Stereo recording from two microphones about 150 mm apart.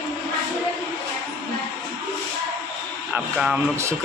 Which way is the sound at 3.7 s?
20° right (ahead or behind).